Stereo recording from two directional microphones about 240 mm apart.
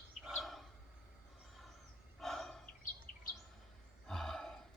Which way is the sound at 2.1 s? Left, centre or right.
Centre.